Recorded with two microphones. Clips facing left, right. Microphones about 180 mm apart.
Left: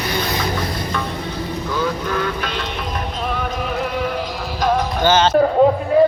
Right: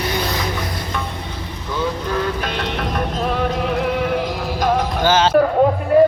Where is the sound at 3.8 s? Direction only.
15° right (ahead or behind).